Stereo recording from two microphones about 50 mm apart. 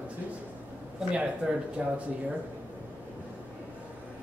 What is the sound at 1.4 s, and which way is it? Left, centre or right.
Speech, centre.